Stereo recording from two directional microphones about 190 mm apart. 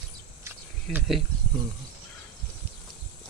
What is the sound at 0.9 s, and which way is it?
Speech, centre (ahead or behind).